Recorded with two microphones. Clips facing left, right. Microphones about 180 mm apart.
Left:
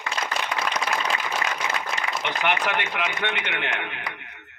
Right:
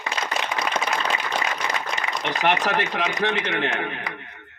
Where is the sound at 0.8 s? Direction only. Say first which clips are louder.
Right 1 dB; centre (ahead or behind).